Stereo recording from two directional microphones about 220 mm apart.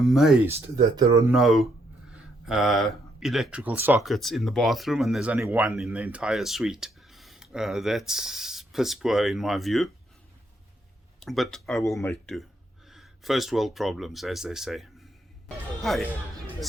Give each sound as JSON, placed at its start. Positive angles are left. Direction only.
{"t": 0.0, "sound": "speech", "side_deg": 0}
{"t": 0.9, "sound": "speech", "side_deg": -15}
{"t": 1.3, "sound": "speech", "side_deg": 0}
{"t": 11.2, "sound": "speech", "side_deg": 0}
{"t": 15.4, "sound": "music", "side_deg": 0}